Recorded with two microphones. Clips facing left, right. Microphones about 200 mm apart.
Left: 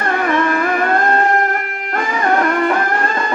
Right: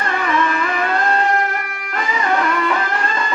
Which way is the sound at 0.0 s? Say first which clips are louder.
Left 3 dB; 55° left (ahead or behind).